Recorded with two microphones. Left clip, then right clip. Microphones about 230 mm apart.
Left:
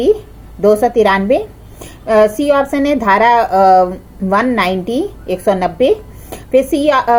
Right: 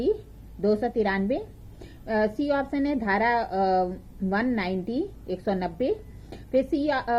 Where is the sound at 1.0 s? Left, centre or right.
Left.